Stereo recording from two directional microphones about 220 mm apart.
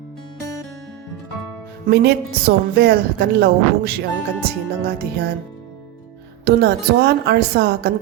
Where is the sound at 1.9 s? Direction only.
40° right (ahead or behind).